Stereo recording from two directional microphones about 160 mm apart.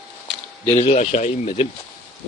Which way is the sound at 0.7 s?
40° left (ahead or behind).